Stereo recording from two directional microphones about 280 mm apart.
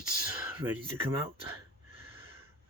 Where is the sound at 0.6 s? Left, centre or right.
Centre.